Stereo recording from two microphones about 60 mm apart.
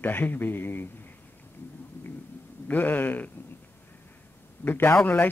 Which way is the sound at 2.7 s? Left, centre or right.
Left.